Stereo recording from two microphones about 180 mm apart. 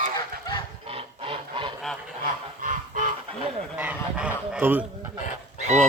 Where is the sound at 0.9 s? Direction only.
30° right (ahead or behind).